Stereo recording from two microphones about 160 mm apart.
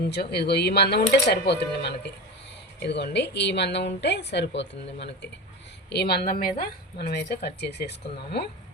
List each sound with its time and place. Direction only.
0.1 s a woman's voice: 90° left; by 6.7 s 65° left (ahead or behind)
7.1 s speech: 90° left